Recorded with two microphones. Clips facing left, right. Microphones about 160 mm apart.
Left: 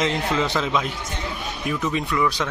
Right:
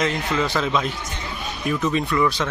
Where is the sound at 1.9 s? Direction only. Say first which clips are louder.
Right 2 dB; 10° left (ahead or behind).